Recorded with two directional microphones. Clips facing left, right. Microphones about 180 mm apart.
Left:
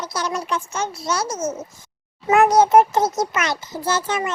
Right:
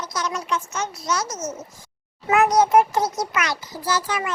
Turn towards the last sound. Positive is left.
turn(degrees=25)  # may be behind; listen again after turning